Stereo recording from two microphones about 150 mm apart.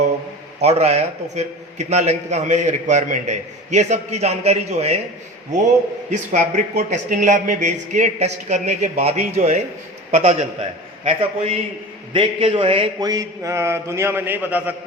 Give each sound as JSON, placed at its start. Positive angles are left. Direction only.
{"t": 0.6, "sound": "a man's voice", "side_deg": -45}
{"t": 6.1, "sound": "a man's voice", "side_deg": -50}
{"t": 13.0, "sound": "a man's voice", "side_deg": -25}